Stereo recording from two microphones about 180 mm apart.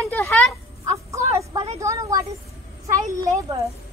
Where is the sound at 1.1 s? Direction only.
15° right (ahead or behind).